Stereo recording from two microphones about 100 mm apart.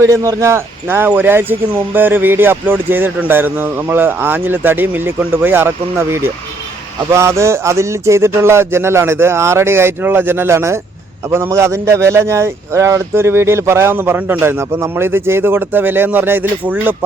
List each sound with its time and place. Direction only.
0.0 s speech: 30° right (ahead or behind)